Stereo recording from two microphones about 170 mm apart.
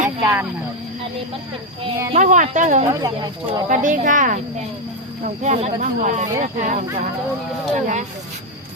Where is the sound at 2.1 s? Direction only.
45° right (ahead or behind).